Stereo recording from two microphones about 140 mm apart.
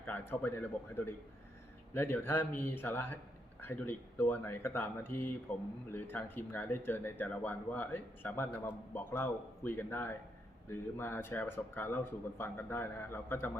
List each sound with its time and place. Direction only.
0.0 s speech: 10° left (ahead or behind)